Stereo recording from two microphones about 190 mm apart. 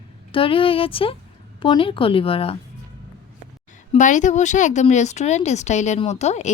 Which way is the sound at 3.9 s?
40° left (ahead or behind).